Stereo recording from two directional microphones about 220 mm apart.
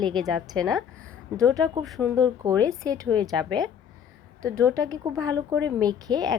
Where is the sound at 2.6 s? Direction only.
5° left (ahead or behind).